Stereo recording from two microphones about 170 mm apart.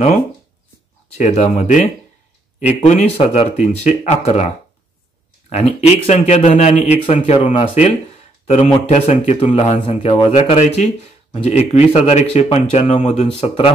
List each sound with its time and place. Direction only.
1.1 s speech: 45° left (ahead or behind)
5.5 s speech: 45° left (ahead or behind)